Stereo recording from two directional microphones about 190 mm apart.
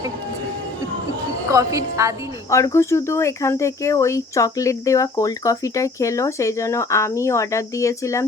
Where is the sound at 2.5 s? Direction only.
15° left (ahead or behind).